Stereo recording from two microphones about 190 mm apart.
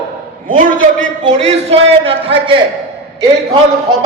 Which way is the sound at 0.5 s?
45° right (ahead or behind).